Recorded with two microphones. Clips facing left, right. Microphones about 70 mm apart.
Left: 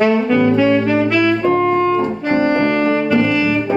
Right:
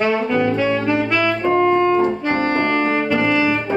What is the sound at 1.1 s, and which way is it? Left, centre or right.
Brass instrument, right.